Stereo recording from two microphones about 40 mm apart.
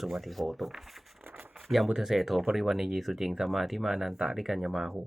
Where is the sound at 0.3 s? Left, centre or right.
Centre.